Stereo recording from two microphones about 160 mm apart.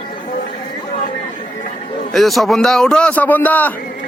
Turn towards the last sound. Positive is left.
turn(degrees=10)  # may be behind; listen again after turning